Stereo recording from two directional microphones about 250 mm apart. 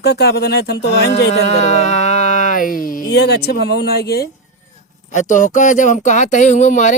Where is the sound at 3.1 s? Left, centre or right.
Left.